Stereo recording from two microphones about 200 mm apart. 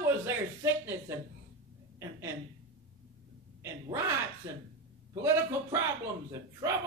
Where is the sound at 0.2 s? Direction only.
15° right (ahead or behind).